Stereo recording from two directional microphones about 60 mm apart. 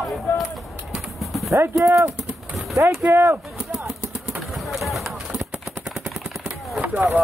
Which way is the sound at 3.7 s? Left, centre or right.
Centre.